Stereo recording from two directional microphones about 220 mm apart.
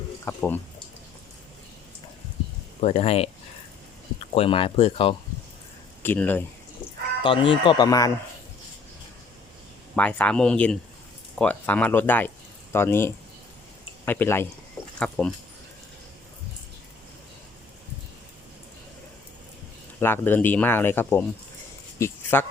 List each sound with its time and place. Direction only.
0.3 s speech: 10° left (ahead or behind)
2.8 s speech: 25° left (ahead or behind)
6.0 s speech: 10° left (ahead or behind)
7.2 s speech: 25° left (ahead or behind)
9.9 s speech: 5° left (ahead or behind)
20.0 s speech: 10° left (ahead or behind)
21.9 s a sound: 10° left (ahead or behind)